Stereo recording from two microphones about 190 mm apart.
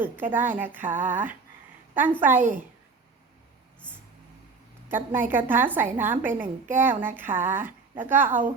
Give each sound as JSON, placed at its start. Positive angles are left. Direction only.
{"t": 0.0, "sound": "a woman's voice", "side_deg": -10}
{"t": 4.9, "sound": "a woman's voice", "side_deg": -10}